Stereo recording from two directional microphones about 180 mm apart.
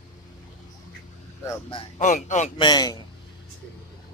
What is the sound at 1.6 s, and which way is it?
Laughter, 30° left (ahead or behind).